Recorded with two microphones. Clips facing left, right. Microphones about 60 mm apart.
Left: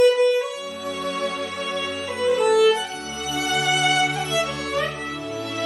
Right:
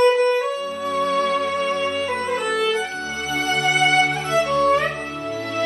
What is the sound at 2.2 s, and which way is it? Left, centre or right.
Music, right.